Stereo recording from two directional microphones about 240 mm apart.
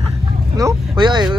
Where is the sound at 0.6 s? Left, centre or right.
Centre.